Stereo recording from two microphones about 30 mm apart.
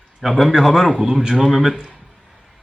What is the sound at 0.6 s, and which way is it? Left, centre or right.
Speech, centre.